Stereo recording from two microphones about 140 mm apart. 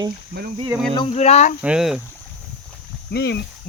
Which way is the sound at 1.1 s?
50° left (ahead or behind).